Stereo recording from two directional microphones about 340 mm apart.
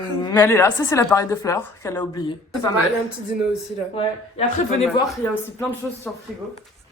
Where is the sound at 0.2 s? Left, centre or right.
Centre.